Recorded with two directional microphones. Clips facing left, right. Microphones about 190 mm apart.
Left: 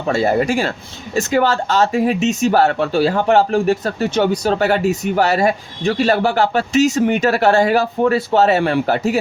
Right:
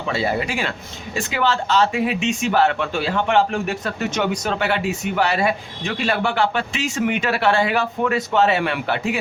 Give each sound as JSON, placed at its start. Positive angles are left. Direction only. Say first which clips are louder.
{"t": 0.1, "sound": "speech", "louder": "left 7 dB", "side_deg": 45}